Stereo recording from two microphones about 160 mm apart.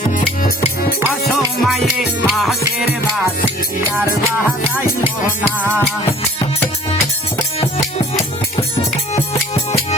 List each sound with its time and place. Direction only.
0.1 s music: 65° left (ahead or behind)
1.3 s music: centre (ahead or behind)
5.5 s music: 15° right (ahead or behind)